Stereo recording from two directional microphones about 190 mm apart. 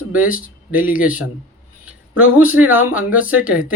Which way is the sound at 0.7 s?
10° right (ahead or behind).